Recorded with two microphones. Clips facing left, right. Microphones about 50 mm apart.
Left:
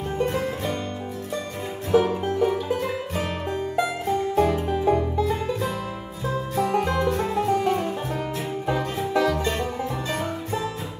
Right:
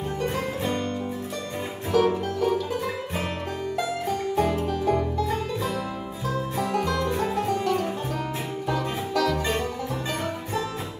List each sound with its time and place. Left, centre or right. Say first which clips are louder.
1.9 s music: left 2 dB; left
3.8 s music: left 2 dB; left